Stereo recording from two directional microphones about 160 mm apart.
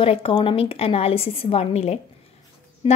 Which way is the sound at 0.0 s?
35° left (ahead or behind).